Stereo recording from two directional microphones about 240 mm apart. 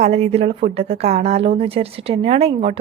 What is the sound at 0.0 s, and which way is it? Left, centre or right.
Speech, right.